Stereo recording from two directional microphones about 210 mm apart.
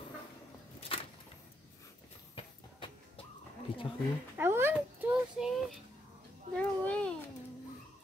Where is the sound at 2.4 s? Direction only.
25° left (ahead or behind).